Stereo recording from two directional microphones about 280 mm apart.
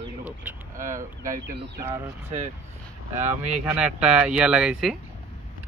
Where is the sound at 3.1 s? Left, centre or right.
Right.